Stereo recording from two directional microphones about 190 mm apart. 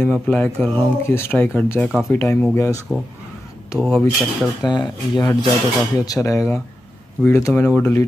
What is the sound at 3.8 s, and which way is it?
Speech, 5° left (ahead or behind).